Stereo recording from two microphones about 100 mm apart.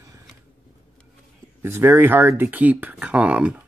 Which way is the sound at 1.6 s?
25° right (ahead or behind).